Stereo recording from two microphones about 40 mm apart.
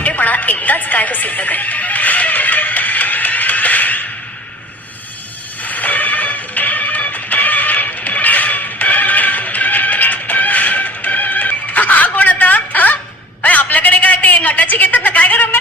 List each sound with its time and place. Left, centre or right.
0.0 s music: left
5.6 s music: left
13.4 s a sound: left